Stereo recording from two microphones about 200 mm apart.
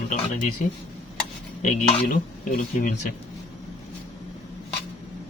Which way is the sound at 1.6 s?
40° left (ahead or behind).